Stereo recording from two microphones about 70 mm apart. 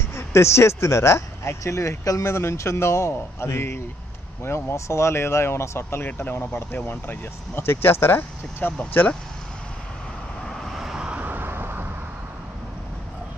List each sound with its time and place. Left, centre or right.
0.1 s speech: left
10.4 s vehicle: centre
11.1 s vehicle: right